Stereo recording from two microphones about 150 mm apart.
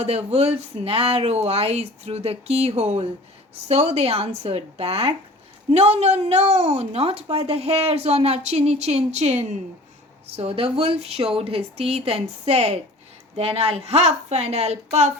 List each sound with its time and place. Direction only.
0.0 s a woman's voice: 40° right (ahead or behind)